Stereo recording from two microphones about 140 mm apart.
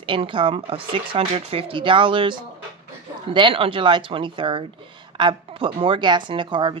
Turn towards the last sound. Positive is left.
turn(degrees=-35)  # may be behind; listen again after turning